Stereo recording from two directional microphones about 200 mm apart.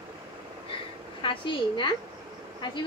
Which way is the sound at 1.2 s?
25° left (ahead or behind).